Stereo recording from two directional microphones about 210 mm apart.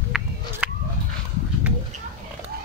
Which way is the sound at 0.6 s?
5° right (ahead or behind).